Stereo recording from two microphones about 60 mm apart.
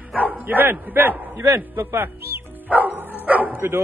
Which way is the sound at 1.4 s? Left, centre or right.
Right.